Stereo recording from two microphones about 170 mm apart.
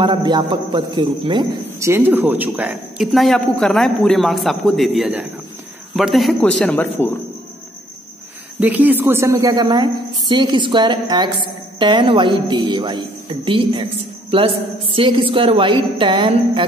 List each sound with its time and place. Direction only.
0.0 s a woman's voice: 25° right (ahead or behind)
1.8 s speech: 15° right (ahead or behind); by 7.1 s 10° left (ahead or behind)
8.5 s a woman's voice: 10° right (ahead or behind); by 13.0 s 25° right (ahead or behind)
14.3 s a woman's voice: 30° right (ahead or behind)